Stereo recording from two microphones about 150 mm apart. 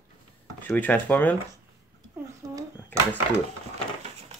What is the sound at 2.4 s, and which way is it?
Speech, 25° right (ahead or behind).